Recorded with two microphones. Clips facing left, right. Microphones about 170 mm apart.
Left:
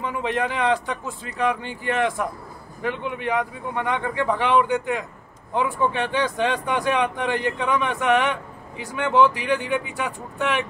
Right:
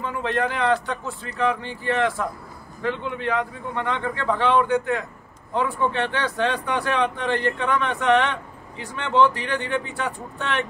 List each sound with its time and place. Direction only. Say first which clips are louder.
0.0 s speech: even; 15° left (ahead or behind)